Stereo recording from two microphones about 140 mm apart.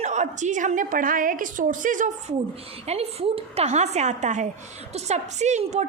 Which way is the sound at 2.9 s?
45° right (ahead or behind).